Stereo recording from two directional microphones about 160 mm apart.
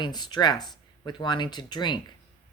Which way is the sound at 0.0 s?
25° left (ahead or behind).